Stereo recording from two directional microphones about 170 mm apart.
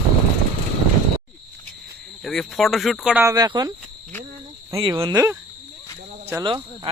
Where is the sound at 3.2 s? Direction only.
20° right (ahead or behind).